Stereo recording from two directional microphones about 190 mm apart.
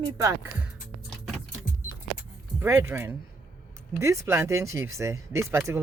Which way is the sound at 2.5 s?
15° right (ahead or behind).